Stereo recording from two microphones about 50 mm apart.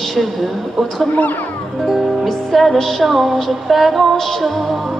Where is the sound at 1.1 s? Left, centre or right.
Left.